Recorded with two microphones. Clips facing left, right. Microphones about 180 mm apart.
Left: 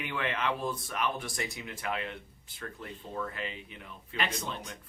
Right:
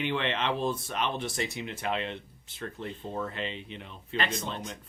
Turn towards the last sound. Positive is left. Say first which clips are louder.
# right 3 dB
turn(degrees=-25)  # may be behind; listen again after turning